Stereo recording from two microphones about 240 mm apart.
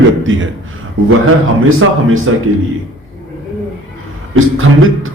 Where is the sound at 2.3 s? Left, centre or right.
Right.